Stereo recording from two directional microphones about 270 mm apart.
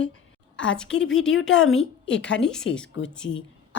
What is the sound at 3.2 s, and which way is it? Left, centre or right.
Speech, left.